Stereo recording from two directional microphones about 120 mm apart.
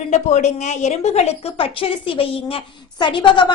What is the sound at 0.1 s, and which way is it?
A woman's voice, 75° left (ahead or behind).